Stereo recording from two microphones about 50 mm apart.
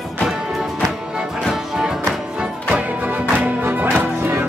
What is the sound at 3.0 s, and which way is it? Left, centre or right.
Music, right.